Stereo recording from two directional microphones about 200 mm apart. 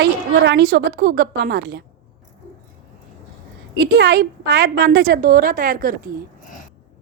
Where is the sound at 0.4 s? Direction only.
55° right (ahead or behind).